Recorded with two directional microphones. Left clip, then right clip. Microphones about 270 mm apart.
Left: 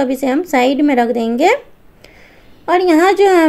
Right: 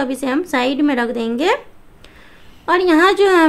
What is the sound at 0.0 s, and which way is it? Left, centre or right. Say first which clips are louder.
A woman's voice: left 4 dB; centre.